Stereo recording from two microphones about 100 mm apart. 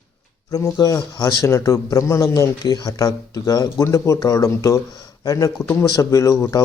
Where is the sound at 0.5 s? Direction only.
35° left (ahead or behind).